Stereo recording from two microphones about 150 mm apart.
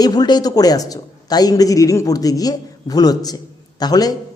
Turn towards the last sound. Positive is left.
turn(degrees=25)  # may be behind; listen again after turning